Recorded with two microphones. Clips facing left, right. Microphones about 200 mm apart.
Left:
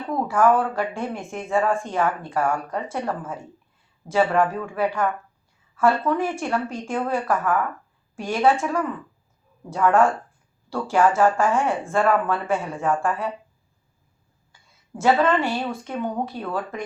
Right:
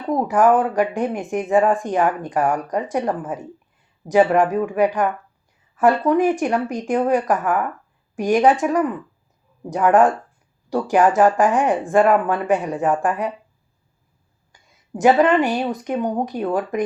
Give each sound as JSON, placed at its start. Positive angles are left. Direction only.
{"t": 0.1, "sound": "speech", "side_deg": -15}
{"t": 14.5, "sound": "speech", "side_deg": -15}